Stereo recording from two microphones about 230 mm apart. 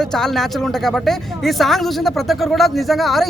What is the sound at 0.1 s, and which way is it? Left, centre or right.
Speech, centre.